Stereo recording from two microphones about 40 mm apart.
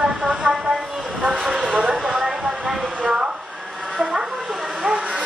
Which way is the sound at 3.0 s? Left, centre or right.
Right.